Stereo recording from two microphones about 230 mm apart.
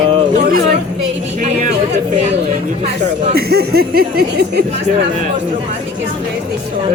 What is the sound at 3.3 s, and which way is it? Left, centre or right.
Speech, right.